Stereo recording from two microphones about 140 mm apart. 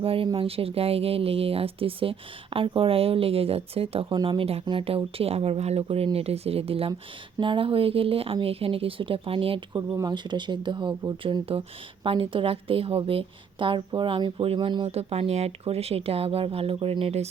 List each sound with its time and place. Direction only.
0.0 s a woman's voice: 40° right (ahead or behind)
9.7 s a woman's voice: 25° right (ahead or behind)
14.8 s speech: 45° right (ahead or behind)